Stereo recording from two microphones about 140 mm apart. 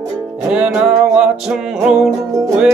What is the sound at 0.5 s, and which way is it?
Music, 5° right (ahead or behind).